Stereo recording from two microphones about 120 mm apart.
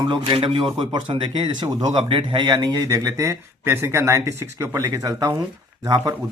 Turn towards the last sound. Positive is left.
turn(degrees=-30)  # may be behind; listen again after turning